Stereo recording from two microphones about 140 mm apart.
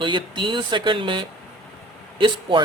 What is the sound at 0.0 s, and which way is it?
A man's voice, 35° right (ahead or behind).